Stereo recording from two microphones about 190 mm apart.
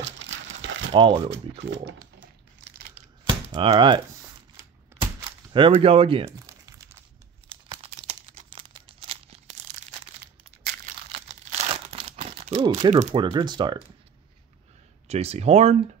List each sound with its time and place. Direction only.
0.0 s crumpling: 70° right (ahead or behind)
0.9 s speech: 25° right (ahead or behind)
2.9 s a sound: 30° right (ahead or behind)
5.0 s a sound: 25° right (ahead or behind)
7.4 s crumpling: 25° right (ahead or behind)
11.1 s crumpling: 30° right (ahead or behind)
12.9 s speech: 35° right (ahead or behind)
13.2 s speech: 25° right (ahead or behind)
15.0 s speech: 35° right (ahead or behind)